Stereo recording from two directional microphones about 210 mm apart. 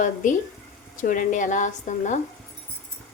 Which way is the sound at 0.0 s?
40° left (ahead or behind).